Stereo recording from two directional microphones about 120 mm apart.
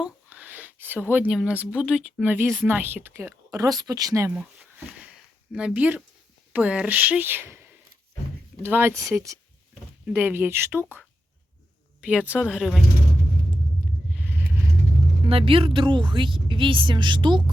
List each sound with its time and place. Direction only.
0.0 s a sound: 15° right (ahead or behind)
1.4 s speech: 10° right (ahead or behind); by 4.3 s 30° right (ahead or behind)
5.5 s speech: 10° right (ahead or behind)
8.9 s speech: centre (ahead or behind)
9.1 s speech: 25° right (ahead or behind); by 12.8 s centre (ahead or behind)
14.3 s vehicle: 15° right (ahead or behind)
15.2 s speech: 50° right (ahead or behind)